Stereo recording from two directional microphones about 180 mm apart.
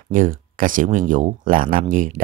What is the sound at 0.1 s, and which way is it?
Speech, 50° right (ahead or behind).